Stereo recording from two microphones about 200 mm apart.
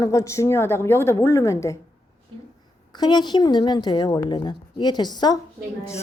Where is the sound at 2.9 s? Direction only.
20° left (ahead or behind).